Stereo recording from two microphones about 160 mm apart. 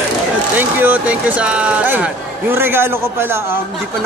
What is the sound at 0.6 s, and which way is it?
Speech, 10° right (ahead or behind).